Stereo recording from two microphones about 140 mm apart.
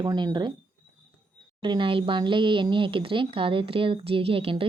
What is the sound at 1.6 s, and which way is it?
Speech, 35° right (ahead or behind).